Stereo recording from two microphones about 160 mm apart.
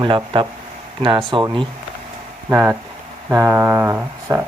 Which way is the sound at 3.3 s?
15° right (ahead or behind).